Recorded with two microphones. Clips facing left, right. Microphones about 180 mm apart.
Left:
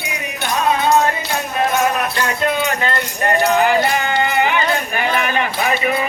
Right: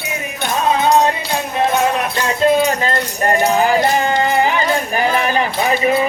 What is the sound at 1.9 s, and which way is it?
Music, 25° right (ahead or behind).